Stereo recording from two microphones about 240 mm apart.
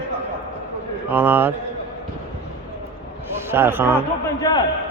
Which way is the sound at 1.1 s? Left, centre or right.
Centre.